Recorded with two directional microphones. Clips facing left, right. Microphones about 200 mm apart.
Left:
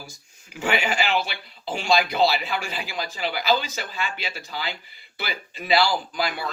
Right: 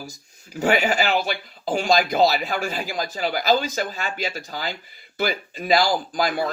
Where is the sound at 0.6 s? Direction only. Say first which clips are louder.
Right 4 dB; 40° right (ahead or behind).